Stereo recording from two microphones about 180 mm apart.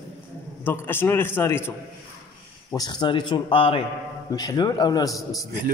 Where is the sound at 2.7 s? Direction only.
25° left (ahead or behind).